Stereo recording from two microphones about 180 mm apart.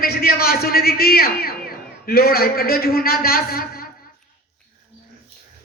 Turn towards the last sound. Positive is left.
turn(degrees=55)  # may be behind; listen again after turning